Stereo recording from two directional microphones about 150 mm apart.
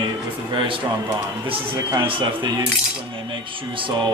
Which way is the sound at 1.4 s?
35° right (ahead or behind).